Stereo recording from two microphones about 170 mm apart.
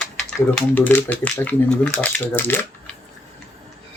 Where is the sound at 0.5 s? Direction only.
10° left (ahead or behind).